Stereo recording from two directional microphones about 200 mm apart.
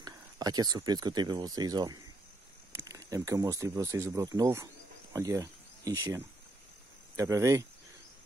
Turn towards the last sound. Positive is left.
turn(degrees=-15)  # may be behind; listen again after turning